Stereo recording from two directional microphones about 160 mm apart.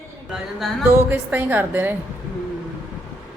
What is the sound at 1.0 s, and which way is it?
Speech, 10° right (ahead or behind).